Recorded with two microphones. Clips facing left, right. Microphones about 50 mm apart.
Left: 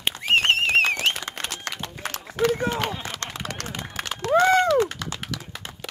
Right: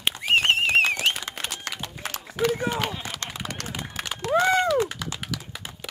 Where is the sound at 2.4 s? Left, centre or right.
Centre.